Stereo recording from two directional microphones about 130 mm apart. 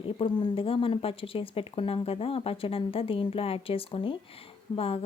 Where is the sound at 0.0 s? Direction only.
40° left (ahead or behind).